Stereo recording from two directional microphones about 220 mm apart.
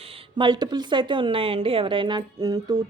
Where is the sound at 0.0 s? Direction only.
25° right (ahead or behind).